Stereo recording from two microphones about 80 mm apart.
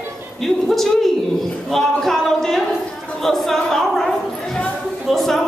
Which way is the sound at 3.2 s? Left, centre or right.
Centre.